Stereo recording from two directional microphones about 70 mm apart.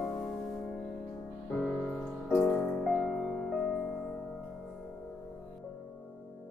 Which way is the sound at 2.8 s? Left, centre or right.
Centre.